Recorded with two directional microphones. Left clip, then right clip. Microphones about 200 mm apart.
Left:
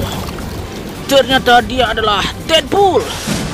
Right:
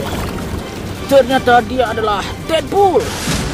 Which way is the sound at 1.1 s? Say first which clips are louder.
Left 1 dB; centre (ahead or behind).